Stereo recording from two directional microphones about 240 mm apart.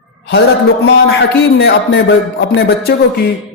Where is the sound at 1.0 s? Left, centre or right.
Left.